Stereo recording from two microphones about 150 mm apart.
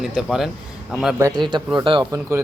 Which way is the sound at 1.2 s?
25° right (ahead or behind).